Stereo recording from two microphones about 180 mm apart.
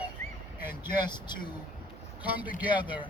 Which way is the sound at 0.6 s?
10° right (ahead or behind).